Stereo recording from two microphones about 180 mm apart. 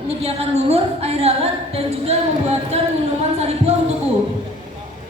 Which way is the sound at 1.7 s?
35° right (ahead or behind).